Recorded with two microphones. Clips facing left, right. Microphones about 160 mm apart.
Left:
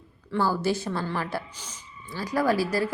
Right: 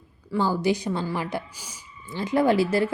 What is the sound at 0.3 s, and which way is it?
A woman's voice, 15° right (ahead or behind).